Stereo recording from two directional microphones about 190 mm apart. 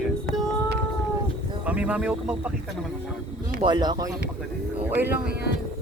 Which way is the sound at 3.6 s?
20° right (ahead or behind).